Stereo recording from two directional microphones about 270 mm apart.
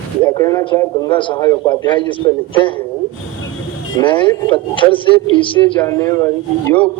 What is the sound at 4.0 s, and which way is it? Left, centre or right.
A man's voice, centre.